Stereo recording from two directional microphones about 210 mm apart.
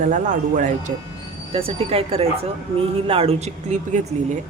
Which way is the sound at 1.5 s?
25° right (ahead or behind).